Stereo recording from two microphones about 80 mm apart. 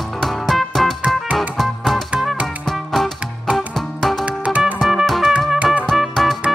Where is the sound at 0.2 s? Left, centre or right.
Centre.